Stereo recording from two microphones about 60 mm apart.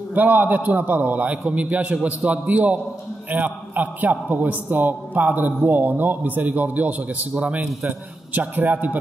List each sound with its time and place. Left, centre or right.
0.1 s a man's voice: right
8.4 s a man's voice: right